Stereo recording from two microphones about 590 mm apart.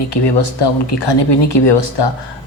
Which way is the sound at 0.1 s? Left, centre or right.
Left.